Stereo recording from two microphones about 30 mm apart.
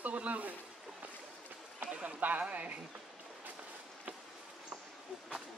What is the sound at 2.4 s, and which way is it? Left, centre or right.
Speech, right.